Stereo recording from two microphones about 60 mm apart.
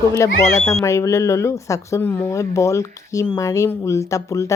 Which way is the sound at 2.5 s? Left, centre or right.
Left.